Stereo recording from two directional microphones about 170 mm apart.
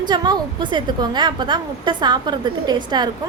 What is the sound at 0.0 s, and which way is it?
A woman's voice, 25° right (ahead or behind).